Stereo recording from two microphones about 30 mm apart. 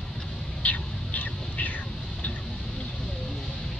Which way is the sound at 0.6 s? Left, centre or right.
Left.